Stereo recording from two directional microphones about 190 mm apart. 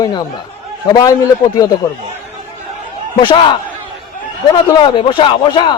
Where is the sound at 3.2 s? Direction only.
25° left (ahead or behind).